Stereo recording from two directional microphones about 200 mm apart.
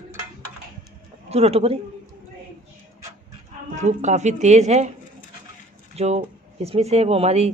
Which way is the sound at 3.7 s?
35° right (ahead or behind).